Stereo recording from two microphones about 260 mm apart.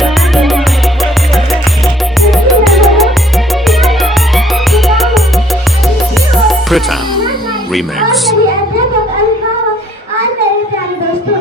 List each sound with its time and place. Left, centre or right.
0.0 s music: centre
2.2 s music: centre
6.3 s music: centre
7.7 s a woman's voice: centre